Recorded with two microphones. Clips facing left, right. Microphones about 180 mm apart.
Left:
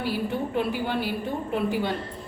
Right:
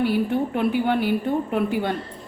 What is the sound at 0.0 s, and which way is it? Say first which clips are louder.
A woman's voice: right 6 dB; 60° right (ahead or behind).